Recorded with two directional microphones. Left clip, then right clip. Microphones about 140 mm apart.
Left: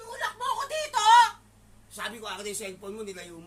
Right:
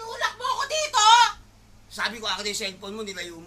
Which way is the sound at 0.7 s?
35° left (ahead or behind).